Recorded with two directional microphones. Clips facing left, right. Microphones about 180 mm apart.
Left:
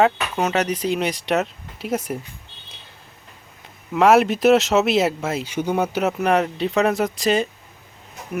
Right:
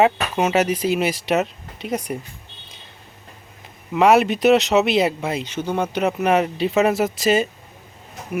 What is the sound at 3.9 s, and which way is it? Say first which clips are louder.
Speech: even; centre (ahead or behind).